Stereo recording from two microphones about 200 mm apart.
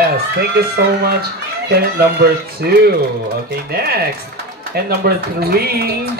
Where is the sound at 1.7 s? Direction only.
50° right (ahead or behind).